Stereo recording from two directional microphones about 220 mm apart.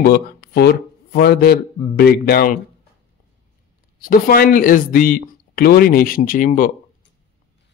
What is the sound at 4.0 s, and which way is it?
A man's voice, 40° left (ahead or behind).